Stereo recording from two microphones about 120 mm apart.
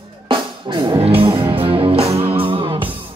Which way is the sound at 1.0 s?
55° right (ahead or behind).